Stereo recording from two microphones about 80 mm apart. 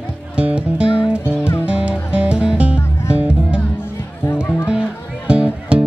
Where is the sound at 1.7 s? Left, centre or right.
Centre.